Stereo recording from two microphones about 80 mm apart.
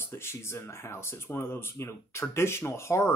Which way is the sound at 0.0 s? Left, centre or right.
Left.